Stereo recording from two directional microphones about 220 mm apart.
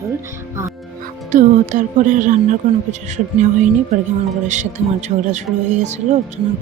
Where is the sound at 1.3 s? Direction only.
35° right (ahead or behind).